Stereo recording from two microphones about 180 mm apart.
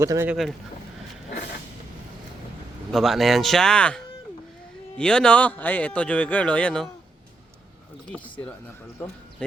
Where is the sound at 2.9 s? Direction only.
Centre (ahead or behind).